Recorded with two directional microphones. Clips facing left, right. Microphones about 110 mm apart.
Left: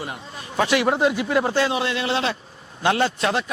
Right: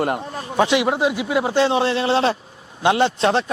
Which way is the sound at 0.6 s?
20° right (ahead or behind).